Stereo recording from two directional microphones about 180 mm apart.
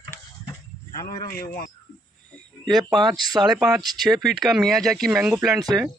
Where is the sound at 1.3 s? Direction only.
55° left (ahead or behind).